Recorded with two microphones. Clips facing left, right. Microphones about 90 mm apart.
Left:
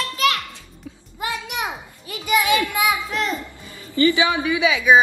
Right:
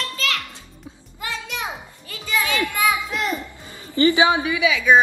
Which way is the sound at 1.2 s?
15° left (ahead or behind).